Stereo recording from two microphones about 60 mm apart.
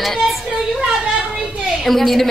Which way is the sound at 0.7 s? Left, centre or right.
Centre.